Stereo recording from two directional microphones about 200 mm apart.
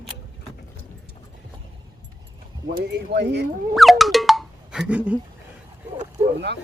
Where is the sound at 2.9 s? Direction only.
55° right (ahead or behind).